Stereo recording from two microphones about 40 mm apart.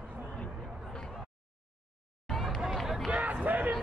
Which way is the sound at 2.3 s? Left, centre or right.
Centre.